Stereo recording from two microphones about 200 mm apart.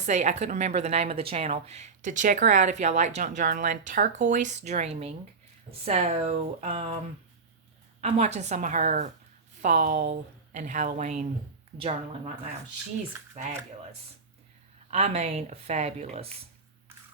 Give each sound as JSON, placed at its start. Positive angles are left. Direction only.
{"t": 0.0, "sound": "a woman's voice", "side_deg": -35}
{"t": 8.0, "sound": "a woman's voice", "side_deg": -30}
{"t": 13.3, "sound": "a woman's voice", "side_deg": -35}
{"t": 14.8, "sound": "a woman's voice", "side_deg": -35}